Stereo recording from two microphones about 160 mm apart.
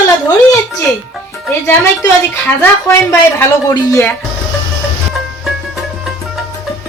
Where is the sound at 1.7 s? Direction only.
15° left (ahead or behind).